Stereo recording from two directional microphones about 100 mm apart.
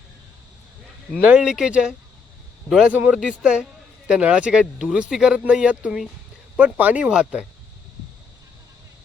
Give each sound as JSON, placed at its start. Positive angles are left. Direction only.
{"t": 1.2, "sound": "a man's voice", "side_deg": -10}
{"t": 2.9, "sound": "speech", "side_deg": -15}